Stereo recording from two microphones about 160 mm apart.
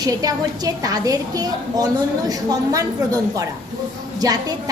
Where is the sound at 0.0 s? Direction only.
25° right (ahead or behind).